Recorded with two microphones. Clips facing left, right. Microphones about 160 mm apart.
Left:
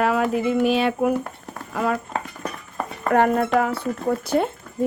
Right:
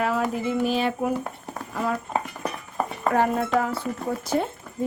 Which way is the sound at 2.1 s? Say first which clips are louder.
Right 1 dB; 10° right (ahead or behind).